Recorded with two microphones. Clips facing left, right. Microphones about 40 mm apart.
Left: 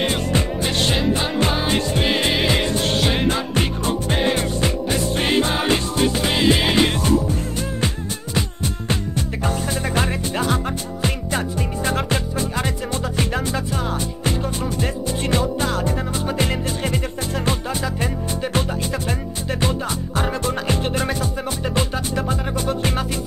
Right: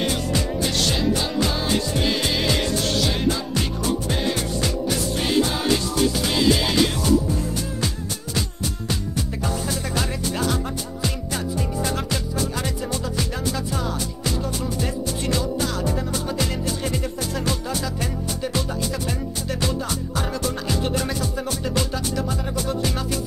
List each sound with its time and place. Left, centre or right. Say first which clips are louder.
0.1 s music: left 2 dB; left
9.4 s music: left 4 dB; left
14.8 s music: left 2 dB; left
20.2 s music: left 5 dB; left